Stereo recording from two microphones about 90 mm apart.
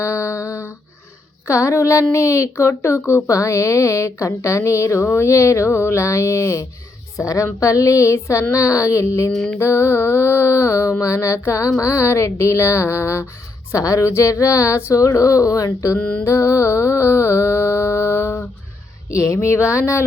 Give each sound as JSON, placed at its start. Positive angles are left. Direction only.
{"t": 0.0, "sound": "a sound", "side_deg": 30}
{"t": 1.5, "sound": "speech", "side_deg": 35}
{"t": 9.3, "sound": "mantra", "side_deg": 10}
{"t": 9.6, "sound": "mantra", "side_deg": 30}
{"t": 11.0, "sound": "speech", "side_deg": 35}
{"t": 16.0, "sound": "mantra", "side_deg": 15}
{"t": 16.2, "sound": "music", "side_deg": 35}
{"t": 19.1, "sound": "speech", "side_deg": 35}